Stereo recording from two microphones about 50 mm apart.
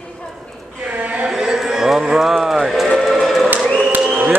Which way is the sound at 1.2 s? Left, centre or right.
Centre.